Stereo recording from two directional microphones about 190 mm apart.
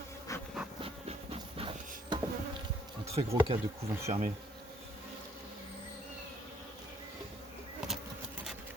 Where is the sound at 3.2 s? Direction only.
30° right (ahead or behind).